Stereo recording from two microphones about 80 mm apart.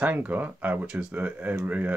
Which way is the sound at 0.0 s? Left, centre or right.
Centre.